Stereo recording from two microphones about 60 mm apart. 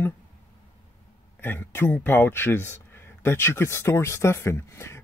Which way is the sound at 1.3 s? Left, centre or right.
Left.